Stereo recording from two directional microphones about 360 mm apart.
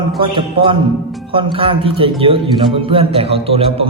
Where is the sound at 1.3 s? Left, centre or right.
Centre.